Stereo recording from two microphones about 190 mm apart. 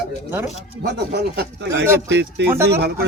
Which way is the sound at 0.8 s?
65° right (ahead or behind).